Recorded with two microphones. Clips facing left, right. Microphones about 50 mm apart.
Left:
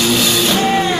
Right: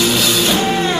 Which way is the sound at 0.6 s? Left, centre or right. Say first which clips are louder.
Left 2 dB; left.